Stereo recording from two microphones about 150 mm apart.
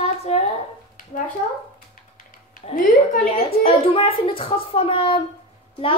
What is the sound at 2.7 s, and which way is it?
Speech, 65° left (ahead or behind).